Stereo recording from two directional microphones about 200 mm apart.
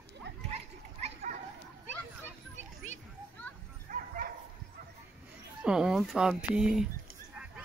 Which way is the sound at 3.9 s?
45° right (ahead or behind).